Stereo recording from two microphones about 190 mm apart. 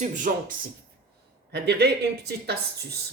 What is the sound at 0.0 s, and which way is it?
Speech, 45° right (ahead or behind).